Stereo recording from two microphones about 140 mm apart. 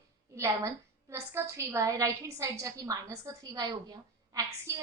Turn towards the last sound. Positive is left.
turn(degrees=-25)  # may be behind; listen again after turning